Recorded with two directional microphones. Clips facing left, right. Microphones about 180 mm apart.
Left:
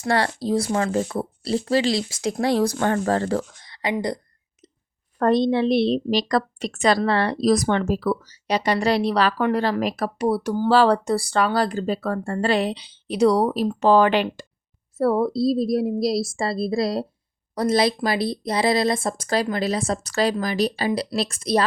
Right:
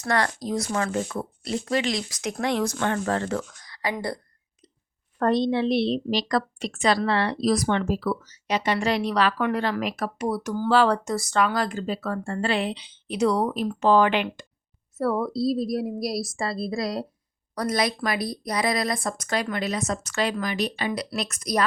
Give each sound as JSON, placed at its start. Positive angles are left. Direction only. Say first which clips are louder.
{"t": 0.0, "sound": "a woman's voice", "louder": "left 3 dB", "side_deg": 30}
{"t": 5.2, "sound": "a woman's voice", "louder": "left 3 dB", "side_deg": 40}